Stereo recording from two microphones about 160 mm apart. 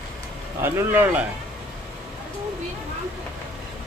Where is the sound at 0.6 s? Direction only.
15° right (ahead or behind).